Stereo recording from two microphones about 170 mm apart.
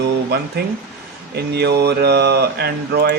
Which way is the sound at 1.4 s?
75° right (ahead or behind).